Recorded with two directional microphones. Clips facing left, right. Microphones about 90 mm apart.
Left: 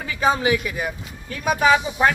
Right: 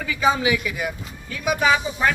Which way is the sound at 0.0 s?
40° left (ahead or behind).